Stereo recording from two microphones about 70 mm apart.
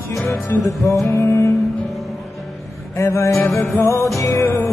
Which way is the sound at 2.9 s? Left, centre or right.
Left.